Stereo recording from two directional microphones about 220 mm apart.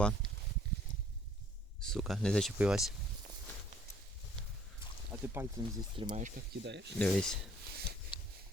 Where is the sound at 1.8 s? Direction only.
Centre (ahead or behind).